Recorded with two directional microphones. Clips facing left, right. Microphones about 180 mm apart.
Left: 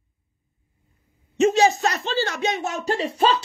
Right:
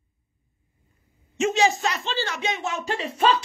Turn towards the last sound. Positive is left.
turn(degrees=35)  # may be behind; listen again after turning